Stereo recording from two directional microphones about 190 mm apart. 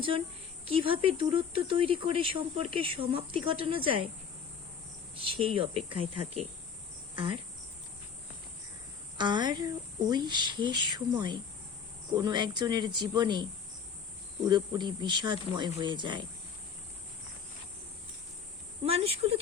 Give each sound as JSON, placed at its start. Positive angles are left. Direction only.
{"t": 0.6, "sound": "speech", "side_deg": -30}
{"t": 5.1, "sound": "speech", "side_deg": -30}
{"t": 9.1, "sound": "speech", "side_deg": -25}
{"t": 18.8, "sound": "speech", "side_deg": -30}